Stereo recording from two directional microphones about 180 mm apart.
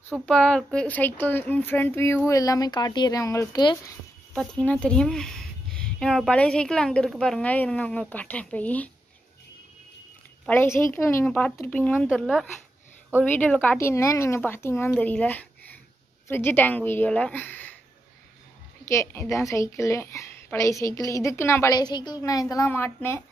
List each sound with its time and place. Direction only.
0.1 s a woman's voice: 5° left (ahead or behind); by 3.9 s 20° left (ahead or behind)
4.3 s speech: 5° left (ahead or behind)
10.5 s a woman's voice: 15° left (ahead or behind)
18.9 s a woman's voice: 15° left (ahead or behind)